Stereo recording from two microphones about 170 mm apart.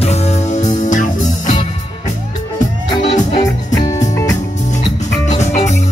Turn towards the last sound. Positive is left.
turn(degrees=45)  # may be behind; listen again after turning